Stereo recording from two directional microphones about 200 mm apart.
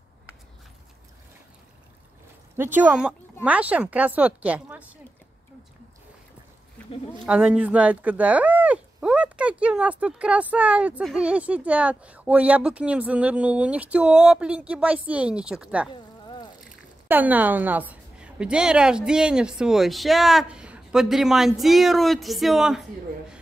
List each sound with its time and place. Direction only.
2.5 s speech: 10° right (ahead or behind)
7.2 s speech: 5° right (ahead or behind)
15.9 s a sound: 25° left (ahead or behind)
16.6 s speech: 10° right (ahead or behind)